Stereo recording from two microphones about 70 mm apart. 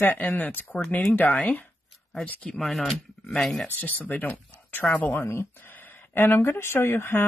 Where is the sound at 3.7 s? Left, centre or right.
Left.